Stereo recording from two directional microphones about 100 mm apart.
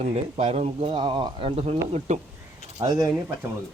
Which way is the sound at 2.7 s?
35° right (ahead or behind).